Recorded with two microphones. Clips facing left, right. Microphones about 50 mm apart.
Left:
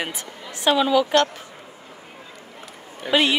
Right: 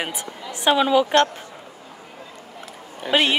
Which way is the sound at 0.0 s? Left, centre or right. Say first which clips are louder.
Right 1 dB; centre.